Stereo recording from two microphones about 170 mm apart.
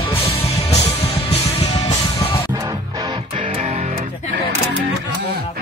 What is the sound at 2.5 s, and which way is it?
Music, 25° right (ahead or behind).